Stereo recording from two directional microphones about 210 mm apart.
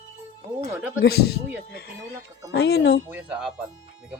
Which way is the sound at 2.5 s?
50° left (ahead or behind).